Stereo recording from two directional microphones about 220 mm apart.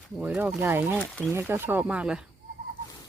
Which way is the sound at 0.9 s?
5° left (ahead or behind).